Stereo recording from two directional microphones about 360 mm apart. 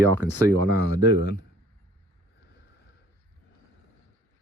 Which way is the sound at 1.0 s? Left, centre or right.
Left.